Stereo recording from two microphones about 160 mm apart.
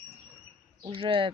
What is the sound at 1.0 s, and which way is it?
Speech, 35° right (ahead or behind).